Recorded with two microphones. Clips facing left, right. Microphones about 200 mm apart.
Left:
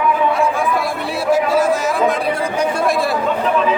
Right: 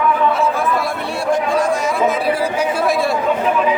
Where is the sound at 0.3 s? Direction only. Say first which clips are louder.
Even; centre (ahead or behind).